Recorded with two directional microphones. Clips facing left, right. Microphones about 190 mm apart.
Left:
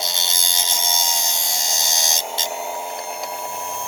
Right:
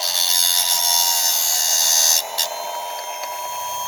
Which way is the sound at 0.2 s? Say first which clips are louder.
Left 1 dB; 20° left (ahead or behind).